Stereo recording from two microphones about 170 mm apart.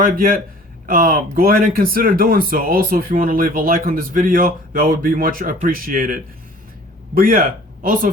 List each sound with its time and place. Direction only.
0.0 s speech: 60° right (ahead or behind)